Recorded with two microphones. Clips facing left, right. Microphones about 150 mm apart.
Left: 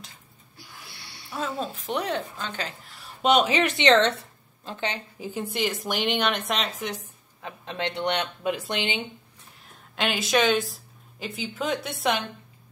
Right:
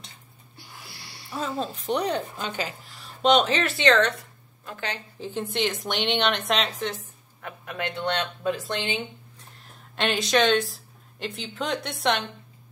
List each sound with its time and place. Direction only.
1.3 s a woman's voice: centre (ahead or behind)
2.3 s a woman's voice: 10° right (ahead or behind)
3.2 s a woman's voice: 10° left (ahead or behind)
6.8 s a sound: 15° left (ahead or behind)
7.6 s speech: 20° left (ahead or behind)
9.6 s speech: centre (ahead or behind)